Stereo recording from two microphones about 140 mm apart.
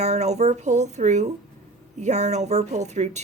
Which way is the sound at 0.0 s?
50° right (ahead or behind).